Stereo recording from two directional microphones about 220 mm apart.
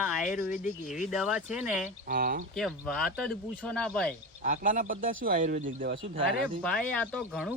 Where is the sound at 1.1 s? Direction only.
Centre (ahead or behind).